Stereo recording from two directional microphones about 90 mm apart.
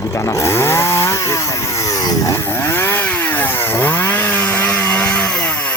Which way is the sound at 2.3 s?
25° left (ahead or behind).